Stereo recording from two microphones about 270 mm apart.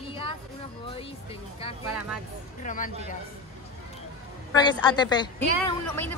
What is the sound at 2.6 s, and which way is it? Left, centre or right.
Speech, left.